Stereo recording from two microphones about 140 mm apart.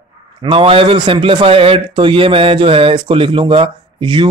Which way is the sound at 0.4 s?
40° right (ahead or behind).